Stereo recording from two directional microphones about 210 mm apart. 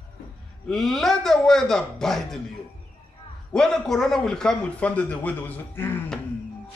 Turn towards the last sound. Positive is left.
turn(degrees=10)  # may be behind; listen again after turning